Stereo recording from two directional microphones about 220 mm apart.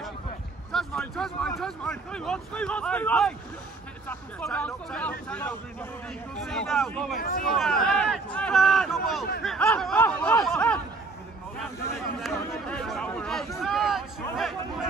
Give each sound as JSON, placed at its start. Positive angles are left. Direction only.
{"t": 0.7, "sound": "speech", "side_deg": 0}
{"t": 7.2, "sound": "speech", "side_deg": 40}
{"t": 7.4, "sound": "speech", "side_deg": 0}
{"t": 12.2, "sound": "speech", "side_deg": 0}